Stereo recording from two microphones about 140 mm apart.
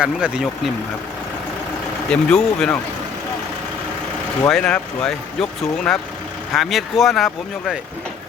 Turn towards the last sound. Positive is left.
turn(degrees=0)  # may be behind; listen again after turning